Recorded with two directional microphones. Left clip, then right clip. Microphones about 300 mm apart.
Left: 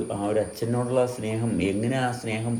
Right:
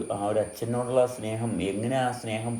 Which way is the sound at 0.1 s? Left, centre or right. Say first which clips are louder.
Right 1 dB; centre.